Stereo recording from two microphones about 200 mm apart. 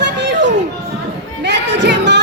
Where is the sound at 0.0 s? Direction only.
60° right (ahead or behind).